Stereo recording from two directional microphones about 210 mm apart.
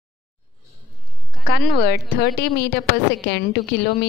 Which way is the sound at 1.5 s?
50° left (ahead or behind).